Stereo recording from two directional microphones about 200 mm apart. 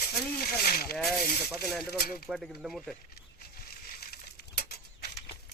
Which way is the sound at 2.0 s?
50° left (ahead or behind).